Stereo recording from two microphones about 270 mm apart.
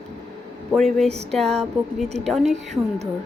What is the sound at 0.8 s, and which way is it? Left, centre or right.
Speech, centre.